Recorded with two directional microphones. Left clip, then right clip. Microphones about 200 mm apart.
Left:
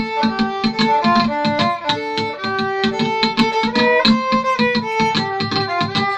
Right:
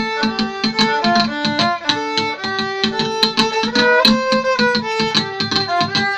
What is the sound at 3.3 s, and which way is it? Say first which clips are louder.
Music: right 1 dB; 45° right (ahead or behind).